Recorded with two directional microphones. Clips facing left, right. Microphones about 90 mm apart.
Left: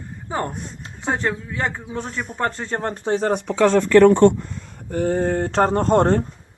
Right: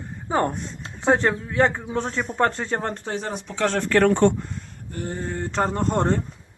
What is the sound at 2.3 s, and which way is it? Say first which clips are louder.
Speech: right 2 dB; centre (ahead or behind).